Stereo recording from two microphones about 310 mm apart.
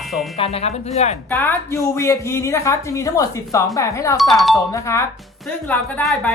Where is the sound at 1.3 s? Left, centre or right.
Centre.